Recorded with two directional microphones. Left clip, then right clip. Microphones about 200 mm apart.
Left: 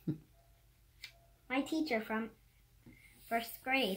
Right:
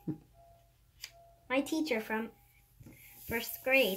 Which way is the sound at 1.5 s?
5° left (ahead or behind).